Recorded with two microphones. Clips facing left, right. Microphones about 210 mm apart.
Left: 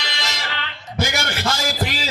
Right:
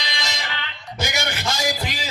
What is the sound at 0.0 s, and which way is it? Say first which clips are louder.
Music: left 1 dB; 15° right (ahead or behind).